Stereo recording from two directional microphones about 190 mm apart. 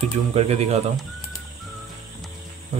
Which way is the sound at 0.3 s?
35° right (ahead or behind).